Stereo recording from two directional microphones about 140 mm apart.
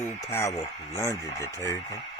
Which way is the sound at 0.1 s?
20° left (ahead or behind).